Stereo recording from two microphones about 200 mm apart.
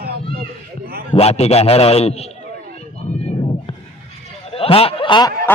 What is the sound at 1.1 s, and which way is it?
A man's voice, 30° left (ahead or behind).